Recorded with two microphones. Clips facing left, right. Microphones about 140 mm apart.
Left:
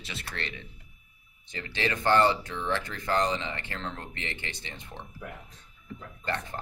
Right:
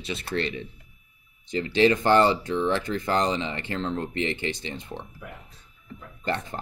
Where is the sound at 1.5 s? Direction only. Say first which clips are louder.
Right 11 dB; 20° right (ahead or behind).